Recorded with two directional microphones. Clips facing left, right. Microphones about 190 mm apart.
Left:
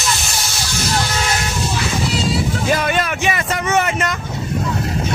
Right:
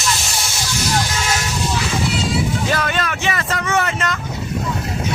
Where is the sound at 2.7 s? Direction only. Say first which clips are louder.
Left 3 dB; 15° left (ahead or behind).